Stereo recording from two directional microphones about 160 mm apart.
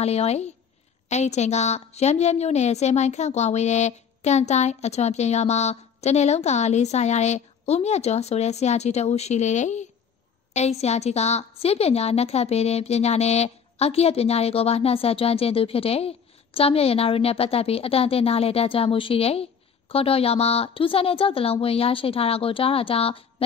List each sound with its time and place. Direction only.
0.0 s a woman's voice: 40° left (ahead or behind)